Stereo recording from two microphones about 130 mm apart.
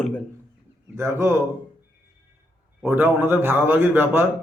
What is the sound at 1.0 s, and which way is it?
Speech, 20° right (ahead or behind).